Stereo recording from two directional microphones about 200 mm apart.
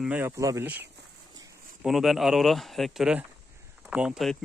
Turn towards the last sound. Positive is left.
turn(degrees=0)  # may be behind; listen again after turning